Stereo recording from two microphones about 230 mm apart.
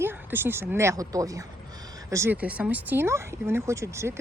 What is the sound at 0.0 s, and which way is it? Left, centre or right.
Speech, centre.